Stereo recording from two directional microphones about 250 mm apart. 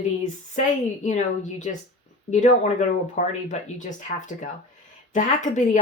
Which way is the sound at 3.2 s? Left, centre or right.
Left.